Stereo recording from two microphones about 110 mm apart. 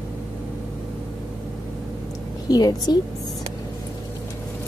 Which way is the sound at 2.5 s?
40° left (ahead or behind).